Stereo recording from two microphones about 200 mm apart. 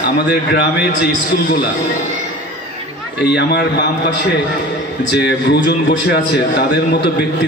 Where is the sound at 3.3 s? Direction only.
55° left (ahead or behind).